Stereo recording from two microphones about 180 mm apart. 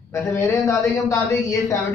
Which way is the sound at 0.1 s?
15° left (ahead or behind).